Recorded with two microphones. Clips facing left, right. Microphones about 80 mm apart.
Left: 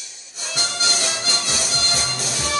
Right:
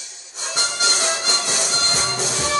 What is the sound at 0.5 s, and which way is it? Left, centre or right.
Music, right.